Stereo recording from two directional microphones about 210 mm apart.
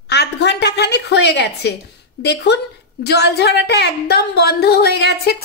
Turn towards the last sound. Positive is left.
turn(degrees=50)  # may be behind; listen again after turning